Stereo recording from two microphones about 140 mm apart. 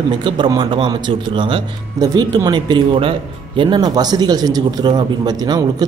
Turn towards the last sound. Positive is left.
turn(degrees=-30)  # may be behind; listen again after turning